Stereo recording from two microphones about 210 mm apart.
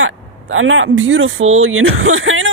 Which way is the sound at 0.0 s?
75° right (ahead or behind).